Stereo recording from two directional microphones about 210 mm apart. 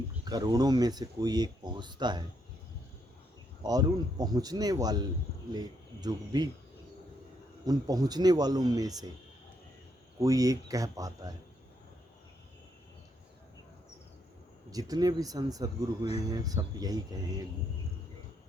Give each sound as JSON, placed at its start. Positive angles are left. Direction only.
{"t": 0.3, "sound": "speech", "side_deg": -20}
{"t": 3.6, "sound": "speech", "side_deg": -20}
{"t": 7.6, "sound": "speech", "side_deg": -20}
{"t": 10.2, "sound": "speech", "side_deg": -15}
{"t": 14.7, "sound": "speech", "side_deg": -15}